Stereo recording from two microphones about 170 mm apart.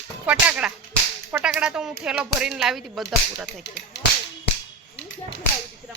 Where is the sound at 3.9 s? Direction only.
80° left.